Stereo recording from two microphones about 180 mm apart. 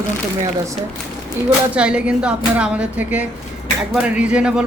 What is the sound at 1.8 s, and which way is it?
A woman's voice, 5° right (ahead or behind).